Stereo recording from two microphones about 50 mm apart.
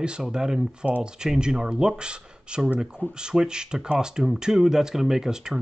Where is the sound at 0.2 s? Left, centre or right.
Centre.